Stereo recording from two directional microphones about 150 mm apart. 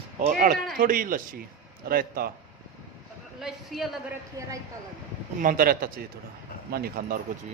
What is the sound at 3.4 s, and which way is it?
Speech, centre (ahead or behind).